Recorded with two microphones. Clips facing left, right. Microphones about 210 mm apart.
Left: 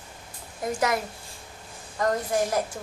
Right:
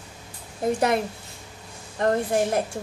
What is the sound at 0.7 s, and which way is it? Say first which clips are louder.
A woman's voice: right 4 dB; 30° right (ahead or behind).